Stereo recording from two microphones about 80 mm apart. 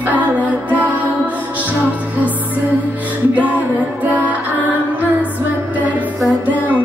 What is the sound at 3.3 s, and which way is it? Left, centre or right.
Music, right.